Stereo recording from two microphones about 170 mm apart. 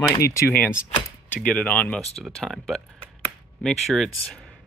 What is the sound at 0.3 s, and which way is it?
Speech, 15° left (ahead or behind).